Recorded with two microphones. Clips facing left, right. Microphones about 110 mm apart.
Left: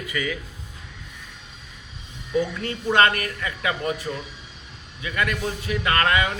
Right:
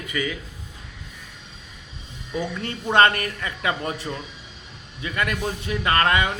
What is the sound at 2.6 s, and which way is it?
Speech, 30° right (ahead or behind).